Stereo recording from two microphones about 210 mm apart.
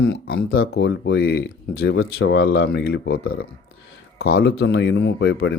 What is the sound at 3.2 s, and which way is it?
Speech, 75° left (ahead or behind).